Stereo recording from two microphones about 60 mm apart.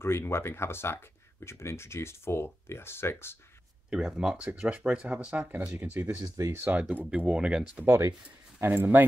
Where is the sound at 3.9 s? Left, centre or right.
Centre.